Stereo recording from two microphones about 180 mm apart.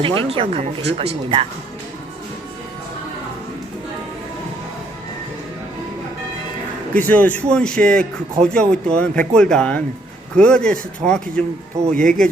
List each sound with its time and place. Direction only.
0.2 s speech: 30° right (ahead or behind)
6.9 s a man's voice: 10° left (ahead or behind)